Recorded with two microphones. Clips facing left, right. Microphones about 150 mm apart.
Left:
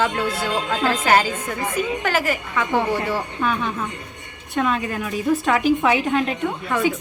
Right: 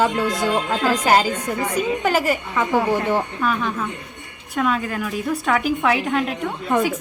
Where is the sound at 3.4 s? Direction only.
Centre (ahead or behind).